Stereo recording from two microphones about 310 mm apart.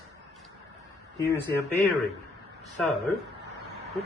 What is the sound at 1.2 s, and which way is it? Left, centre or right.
Speech, centre.